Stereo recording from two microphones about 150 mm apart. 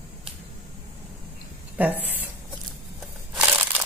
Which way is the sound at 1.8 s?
10° right (ahead or behind).